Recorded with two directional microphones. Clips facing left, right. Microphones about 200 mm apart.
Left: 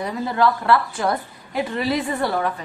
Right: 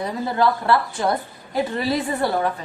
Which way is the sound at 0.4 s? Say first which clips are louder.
Left 1 dB; 30° right (ahead or behind).